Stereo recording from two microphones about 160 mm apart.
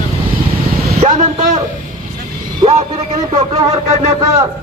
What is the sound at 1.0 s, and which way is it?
Speech, 50° right (ahead or behind).